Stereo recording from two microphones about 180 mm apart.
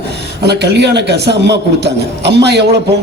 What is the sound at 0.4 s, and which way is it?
A man's voice, 65° right (ahead or behind).